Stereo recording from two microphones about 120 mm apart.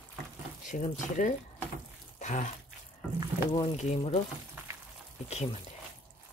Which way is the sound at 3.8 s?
65° left (ahead or behind).